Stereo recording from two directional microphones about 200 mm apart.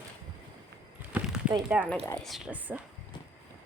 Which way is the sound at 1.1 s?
5° right (ahead or behind).